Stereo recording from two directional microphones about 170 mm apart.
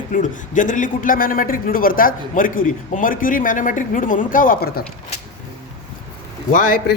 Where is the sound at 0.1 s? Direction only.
50° left (ahead or behind).